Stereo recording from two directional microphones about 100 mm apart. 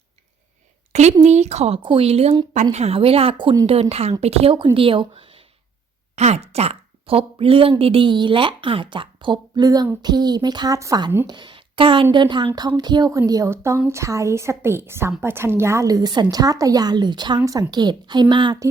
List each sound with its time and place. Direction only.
1.5 s speech: 90° right
1.8 s speech: 65° right (ahead or behind); by 2.3 s 85° right
2.3 s a woman's voice: 40° right (ahead or behind)
2.7 s speech: 80° right
3.7 s speech: 90° right
4.6 s speech: 60° right (ahead or behind)
6.1 s speech: 90° right; by 10.8 s 45° right (ahead or behind)
10.8 s a woman's voice: 30° right (ahead or behind)
11.3 s a woman's voice: 50° right (ahead or behind)